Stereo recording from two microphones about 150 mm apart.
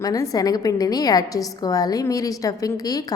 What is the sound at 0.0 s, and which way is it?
A woman's voice, 25° left (ahead or behind).